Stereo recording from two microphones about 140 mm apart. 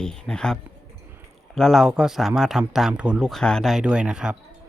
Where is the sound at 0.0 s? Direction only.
5° left (ahead or behind).